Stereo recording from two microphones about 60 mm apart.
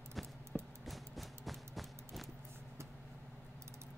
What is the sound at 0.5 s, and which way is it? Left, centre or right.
Music, centre.